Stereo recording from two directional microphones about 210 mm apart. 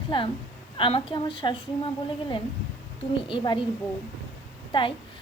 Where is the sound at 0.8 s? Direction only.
25° left (ahead or behind).